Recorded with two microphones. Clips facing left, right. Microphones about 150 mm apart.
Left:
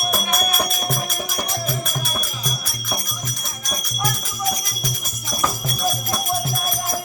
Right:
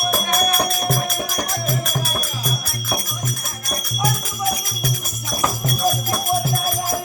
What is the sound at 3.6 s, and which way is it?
Music, 5° right (ahead or behind).